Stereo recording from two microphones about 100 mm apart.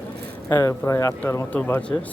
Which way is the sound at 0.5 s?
30° left (ahead or behind).